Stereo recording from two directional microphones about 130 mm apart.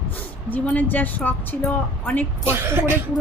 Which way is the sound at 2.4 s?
20° right (ahead or behind).